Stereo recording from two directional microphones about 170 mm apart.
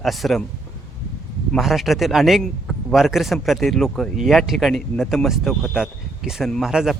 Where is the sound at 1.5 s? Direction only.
Centre (ahead or behind).